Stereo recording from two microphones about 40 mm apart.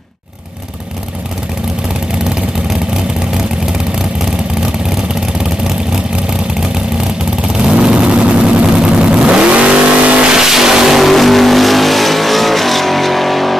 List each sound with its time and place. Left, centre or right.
7.7 s vehicle: right
10.3 s vehicle: centre